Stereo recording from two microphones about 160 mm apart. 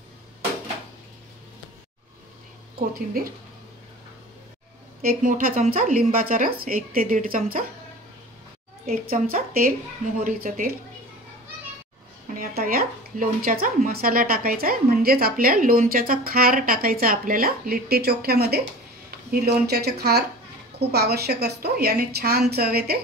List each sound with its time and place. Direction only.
5.0 s a woman's voice: 55° right (ahead or behind)
8.8 s a woman's voice: 65° right (ahead or behind)
12.4 s a woman's voice: 65° right (ahead or behind)